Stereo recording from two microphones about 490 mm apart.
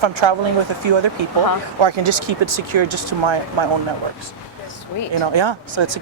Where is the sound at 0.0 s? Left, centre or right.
Right.